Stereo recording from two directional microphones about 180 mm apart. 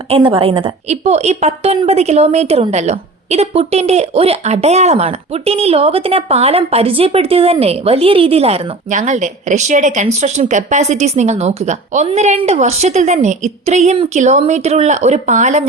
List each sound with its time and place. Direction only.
0.1 s a woman's voice: 30° right (ahead or behind)